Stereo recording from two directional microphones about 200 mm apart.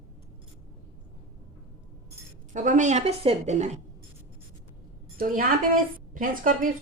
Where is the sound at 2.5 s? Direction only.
40° right (ahead or behind).